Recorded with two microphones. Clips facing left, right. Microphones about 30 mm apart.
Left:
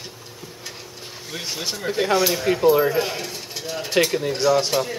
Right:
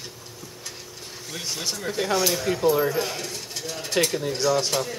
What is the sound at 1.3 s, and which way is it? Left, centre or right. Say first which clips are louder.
Speech: left 2 dB; centre.